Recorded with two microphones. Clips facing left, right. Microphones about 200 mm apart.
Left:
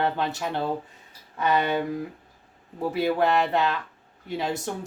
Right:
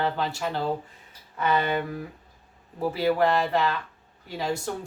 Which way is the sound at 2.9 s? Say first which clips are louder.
Even; 20° left (ahead or behind).